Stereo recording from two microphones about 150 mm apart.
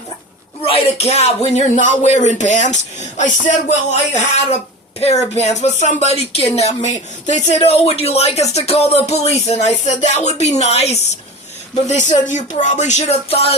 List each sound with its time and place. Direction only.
0.6 s a woman's voice: 40° left (ahead or behind)